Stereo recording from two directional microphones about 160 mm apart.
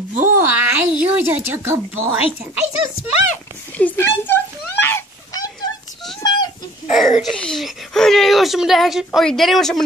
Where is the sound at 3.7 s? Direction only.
10° left (ahead or behind).